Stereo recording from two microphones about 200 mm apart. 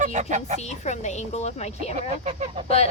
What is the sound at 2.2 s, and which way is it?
Goose, 35° right (ahead or behind).